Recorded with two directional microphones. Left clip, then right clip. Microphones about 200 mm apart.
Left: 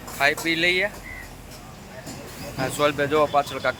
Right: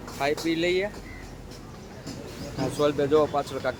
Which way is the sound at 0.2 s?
10° right (ahead or behind).